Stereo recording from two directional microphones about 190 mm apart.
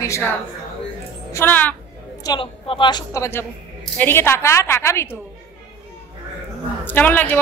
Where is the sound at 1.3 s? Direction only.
10° left (ahead or behind).